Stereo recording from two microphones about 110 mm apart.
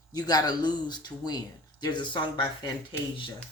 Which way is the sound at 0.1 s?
35° left (ahead or behind).